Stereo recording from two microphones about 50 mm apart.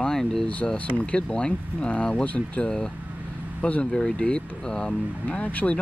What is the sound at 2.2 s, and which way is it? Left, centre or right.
Speech, left.